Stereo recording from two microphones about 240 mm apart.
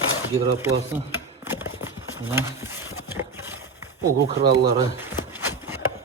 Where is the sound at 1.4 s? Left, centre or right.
Centre.